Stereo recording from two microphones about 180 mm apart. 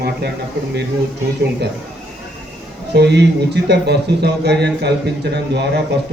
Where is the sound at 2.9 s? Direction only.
70° right (ahead or behind).